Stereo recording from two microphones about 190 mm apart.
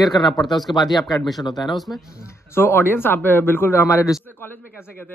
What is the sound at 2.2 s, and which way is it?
A man's voice, 10° left (ahead or behind).